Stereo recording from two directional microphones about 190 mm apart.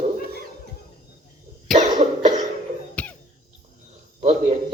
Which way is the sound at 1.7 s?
40° right (ahead or behind).